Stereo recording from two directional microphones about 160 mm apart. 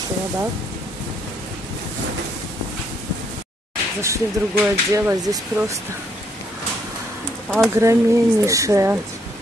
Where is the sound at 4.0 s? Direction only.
15° right (ahead or behind).